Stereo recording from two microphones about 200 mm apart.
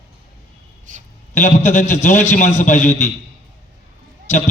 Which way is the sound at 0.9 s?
40° right (ahead or behind).